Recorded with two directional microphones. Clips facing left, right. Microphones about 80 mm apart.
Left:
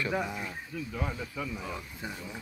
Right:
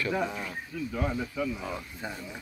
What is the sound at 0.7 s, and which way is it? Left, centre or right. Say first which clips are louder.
Speech: right 6 dB; centre.